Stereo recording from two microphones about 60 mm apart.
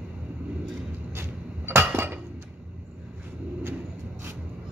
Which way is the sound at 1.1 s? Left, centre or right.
Right.